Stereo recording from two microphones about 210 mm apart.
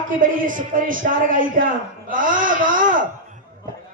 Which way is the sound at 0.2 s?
40° right (ahead or behind).